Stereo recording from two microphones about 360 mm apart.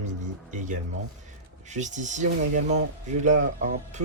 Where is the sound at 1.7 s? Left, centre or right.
Centre.